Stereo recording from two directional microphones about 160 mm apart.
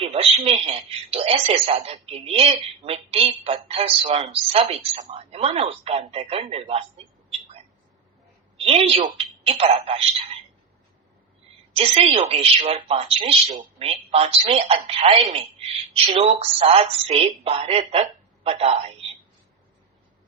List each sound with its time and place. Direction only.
0.0 s speech: 35° right (ahead or behind)
8.5 s a sound: 35° right (ahead or behind)
9.1 s a woman's voice: 40° right (ahead or behind)
11.7 s a woman's voice: 35° right (ahead or behind)